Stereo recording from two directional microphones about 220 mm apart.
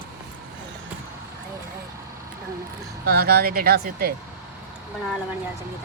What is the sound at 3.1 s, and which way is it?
Speech, 45° right (ahead or behind).